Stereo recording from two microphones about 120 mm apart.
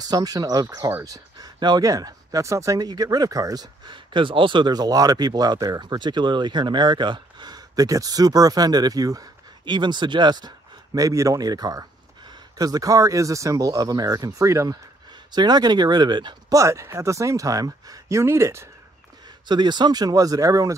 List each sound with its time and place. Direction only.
0.0 s speech: 35° right (ahead or behind)
15.3 s speech: 35° right (ahead or behind)
16.5 s speech: 25° right (ahead or behind)
19.4 s speech: 40° right (ahead or behind)